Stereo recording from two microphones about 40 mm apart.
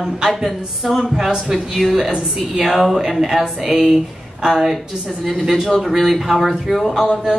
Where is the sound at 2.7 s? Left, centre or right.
Centre.